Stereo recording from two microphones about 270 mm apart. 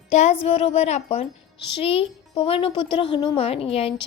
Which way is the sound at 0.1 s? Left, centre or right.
Left.